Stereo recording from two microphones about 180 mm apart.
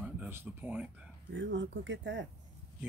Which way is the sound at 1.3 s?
90° right.